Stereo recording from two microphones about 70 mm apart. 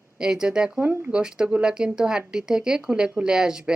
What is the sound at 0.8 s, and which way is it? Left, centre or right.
Speech, right.